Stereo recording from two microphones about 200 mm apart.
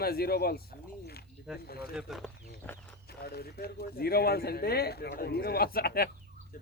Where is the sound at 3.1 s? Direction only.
50° left (ahead or behind).